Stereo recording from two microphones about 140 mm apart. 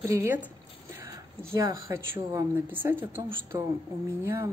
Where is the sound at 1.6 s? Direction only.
20° right (ahead or behind).